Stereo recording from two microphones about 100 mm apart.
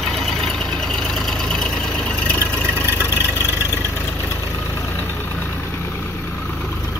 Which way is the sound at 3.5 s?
25° left (ahead or behind).